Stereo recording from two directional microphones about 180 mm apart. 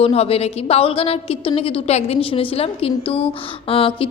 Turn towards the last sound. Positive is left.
turn(degrees=30)  # may be behind; listen again after turning